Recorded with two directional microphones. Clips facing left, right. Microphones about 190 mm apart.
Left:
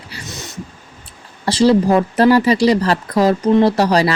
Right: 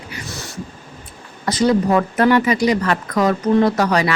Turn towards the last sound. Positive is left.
turn(degrees=35)  # may be behind; listen again after turning